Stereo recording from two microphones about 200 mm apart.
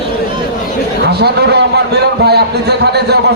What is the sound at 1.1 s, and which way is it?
A man's voice, 55° right (ahead or behind).